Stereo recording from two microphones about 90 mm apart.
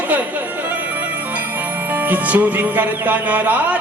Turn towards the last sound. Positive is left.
turn(degrees=-20)  # may be behind; listen again after turning